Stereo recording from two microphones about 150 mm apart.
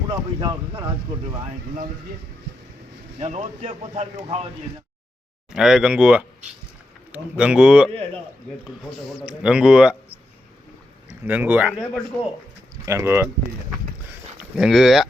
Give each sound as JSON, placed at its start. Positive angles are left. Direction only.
{"t": 0.1, "sound": "speech", "side_deg": -30}
{"t": 3.2, "sound": "speech", "side_deg": -45}
{"t": 5.5, "sound": "a man's voice", "side_deg": -5}
{"t": 12.8, "sound": "speech", "side_deg": -15}
{"t": 14.5, "sound": "a man's voice", "side_deg": 0}